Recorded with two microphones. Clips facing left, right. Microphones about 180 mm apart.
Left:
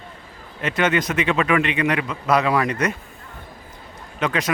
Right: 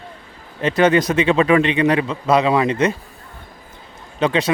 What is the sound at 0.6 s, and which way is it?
Speech, 35° right (ahead or behind).